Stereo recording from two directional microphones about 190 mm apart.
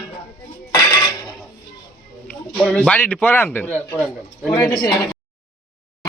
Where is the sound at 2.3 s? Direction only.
5° left (ahead or behind).